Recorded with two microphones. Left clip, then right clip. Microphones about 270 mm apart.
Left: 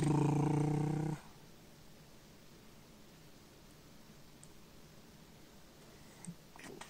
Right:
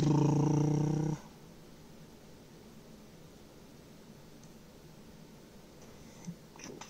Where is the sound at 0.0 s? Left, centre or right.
Left.